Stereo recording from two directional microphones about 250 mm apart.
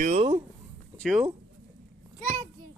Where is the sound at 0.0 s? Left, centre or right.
Right.